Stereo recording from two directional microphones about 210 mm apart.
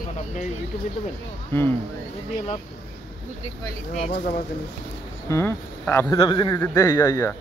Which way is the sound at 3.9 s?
40° left (ahead or behind).